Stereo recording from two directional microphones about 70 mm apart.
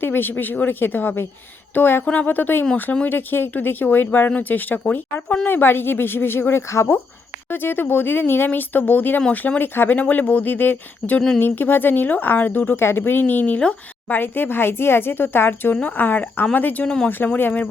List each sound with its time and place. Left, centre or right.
0.0 s speech: left
7.5 s speech: left